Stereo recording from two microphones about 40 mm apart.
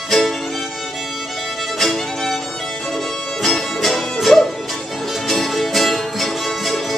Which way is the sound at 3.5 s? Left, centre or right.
Centre.